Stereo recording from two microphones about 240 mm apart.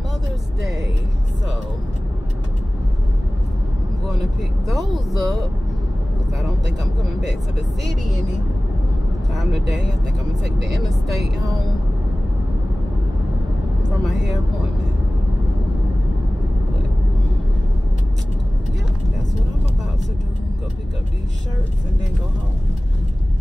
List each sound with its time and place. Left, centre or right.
4.6 s speech: centre
6.8 s speech: right
9.3 s speech: centre